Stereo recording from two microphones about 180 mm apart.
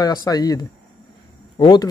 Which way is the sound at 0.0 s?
20° left (ahead or behind).